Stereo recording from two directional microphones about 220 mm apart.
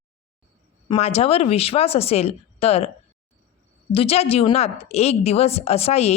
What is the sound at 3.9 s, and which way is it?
Speech, 25° left (ahead or behind).